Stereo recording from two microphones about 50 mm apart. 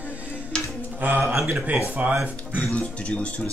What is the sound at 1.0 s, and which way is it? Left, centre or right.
Speech, right.